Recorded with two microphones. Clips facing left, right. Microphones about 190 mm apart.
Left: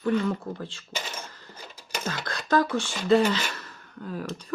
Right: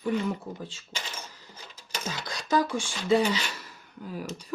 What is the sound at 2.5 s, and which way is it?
Speech, 10° right (ahead or behind).